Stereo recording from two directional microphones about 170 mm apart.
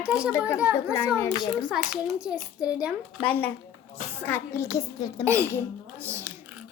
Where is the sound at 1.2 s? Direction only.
20° left (ahead or behind).